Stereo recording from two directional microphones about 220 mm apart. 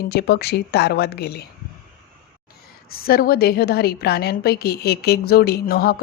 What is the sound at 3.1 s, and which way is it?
A woman's voice, 40° left (ahead or behind).